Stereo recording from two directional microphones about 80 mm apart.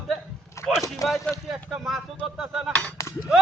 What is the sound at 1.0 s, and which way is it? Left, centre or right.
Speech, left.